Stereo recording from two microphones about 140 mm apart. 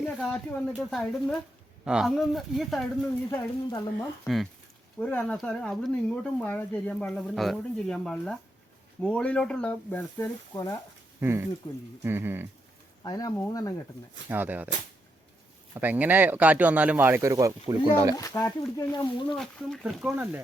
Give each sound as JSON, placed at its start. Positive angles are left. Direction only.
{"t": 0.0, "sound": "speech", "side_deg": 5}
{"t": 3.2, "sound": "speech", "side_deg": 30}
{"t": 4.9, "sound": "speech", "side_deg": 5}
{"t": 11.2, "sound": "speech", "side_deg": -15}
{"t": 11.6, "sound": "speech", "side_deg": 30}
{"t": 12.0, "sound": "speech", "side_deg": -15}
{"t": 13.0, "sound": "speech", "side_deg": 30}
{"t": 14.3, "sound": "speech", "side_deg": -15}
{"t": 15.7, "sound": "speech", "side_deg": -15}
{"t": 18.3, "sound": "speech", "side_deg": 20}
{"t": 19.3, "sound": "speech", "side_deg": 0}